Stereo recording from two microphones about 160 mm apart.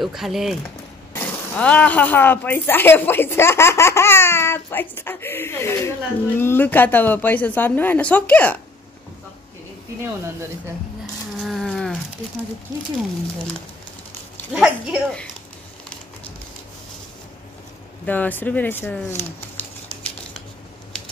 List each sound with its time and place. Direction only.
0.0 s speech: centre (ahead or behind)
1.1 s speech: 10° left (ahead or behind)
11.3 s insect: centre (ahead or behind)
14.5 s speech: 5° right (ahead or behind)
18.0 s speech: 10° left (ahead or behind)